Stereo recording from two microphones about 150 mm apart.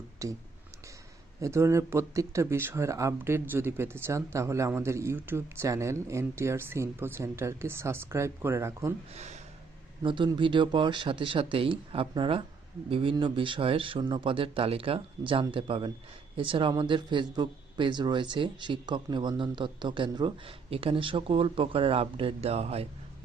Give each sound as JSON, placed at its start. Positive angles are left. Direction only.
{"t": 0.2, "sound": "speech", "side_deg": -20}
{"t": 1.4, "sound": "speech", "side_deg": -20}
{"t": 9.1, "sound": "speech", "side_deg": -50}
{"t": 10.0, "sound": "speech", "side_deg": -30}